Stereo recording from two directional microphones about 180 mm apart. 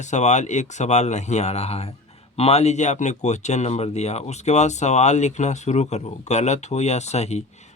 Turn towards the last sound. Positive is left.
turn(degrees=35)  # may be behind; listen again after turning